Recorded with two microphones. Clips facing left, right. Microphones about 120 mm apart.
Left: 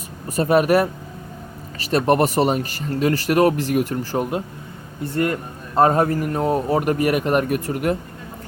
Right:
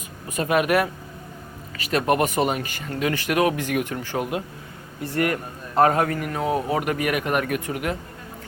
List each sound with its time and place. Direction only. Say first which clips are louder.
0.3 s speech: left 5 dB; 35° left (ahead or behind)
5.1 s speech: left 2 dB; 25° left (ahead or behind)